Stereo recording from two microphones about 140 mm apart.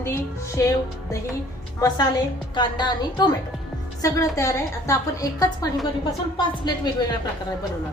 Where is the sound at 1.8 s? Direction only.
30° left (ahead or behind).